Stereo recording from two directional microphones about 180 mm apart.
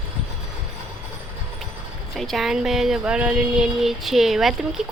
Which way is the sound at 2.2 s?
Centre (ahead or behind).